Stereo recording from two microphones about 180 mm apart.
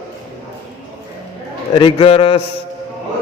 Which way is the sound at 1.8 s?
30° left (ahead or behind).